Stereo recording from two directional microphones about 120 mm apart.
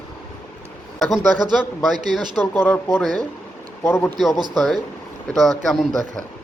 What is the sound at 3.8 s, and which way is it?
Speech, 20° left (ahead or behind).